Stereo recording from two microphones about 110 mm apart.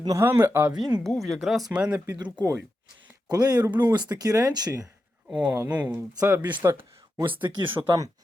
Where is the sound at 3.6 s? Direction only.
20° right (ahead or behind).